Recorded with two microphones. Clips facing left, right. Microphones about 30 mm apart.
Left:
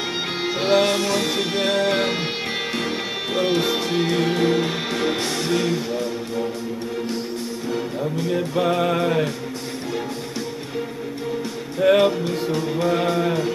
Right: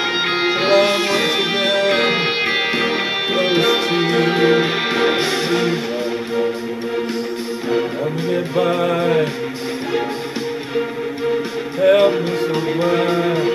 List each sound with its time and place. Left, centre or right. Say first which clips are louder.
0.4 s music: right 3 dB; right
3.3 s music: right 4 dB; right
7.7 s music: right 6 dB; right
11.8 s music: right 3 dB; centre
12.4 s music: right 2 dB; right